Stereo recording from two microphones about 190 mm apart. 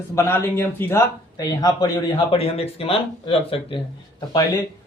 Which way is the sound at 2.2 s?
30° left (ahead or behind).